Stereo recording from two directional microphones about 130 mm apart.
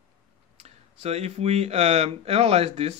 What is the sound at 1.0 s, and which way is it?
Speech, 55° right (ahead or behind).